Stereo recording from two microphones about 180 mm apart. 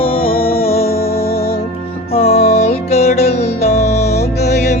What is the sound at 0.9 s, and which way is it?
Music, 60° left (ahead or behind).